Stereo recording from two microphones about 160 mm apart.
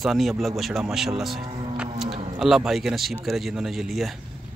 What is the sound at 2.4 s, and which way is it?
Speech, centre (ahead or behind).